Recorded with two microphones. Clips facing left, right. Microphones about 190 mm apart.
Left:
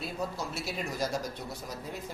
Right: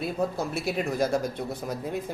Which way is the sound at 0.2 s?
55° right (ahead or behind).